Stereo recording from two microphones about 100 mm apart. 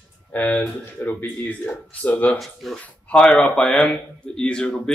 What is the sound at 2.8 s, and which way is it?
Speech, 10° left (ahead or behind).